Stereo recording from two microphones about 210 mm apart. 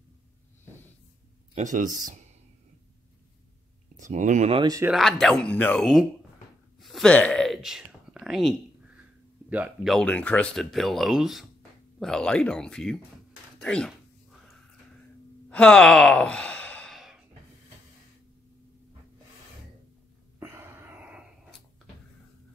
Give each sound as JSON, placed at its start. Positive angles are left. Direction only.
{"t": 1.5, "sound": "speech", "side_deg": -35}
{"t": 4.0, "sound": "speech", "side_deg": -35}
{"t": 4.9, "sound": "speech", "side_deg": 0}
{"t": 6.8, "sound": "whispering", "side_deg": 0}
{"t": 9.5, "sound": "speech", "side_deg": -5}
{"t": 15.5, "sound": "sigh", "side_deg": 5}
{"t": 20.3, "sound": "wheeze", "side_deg": -10}